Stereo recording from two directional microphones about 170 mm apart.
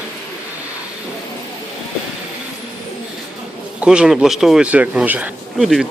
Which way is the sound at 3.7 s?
5° right (ahead or behind).